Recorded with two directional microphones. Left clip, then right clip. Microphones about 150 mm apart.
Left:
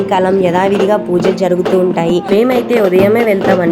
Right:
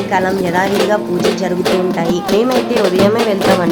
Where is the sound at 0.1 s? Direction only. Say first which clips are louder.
Left 3 dB; 25° left (ahead or behind).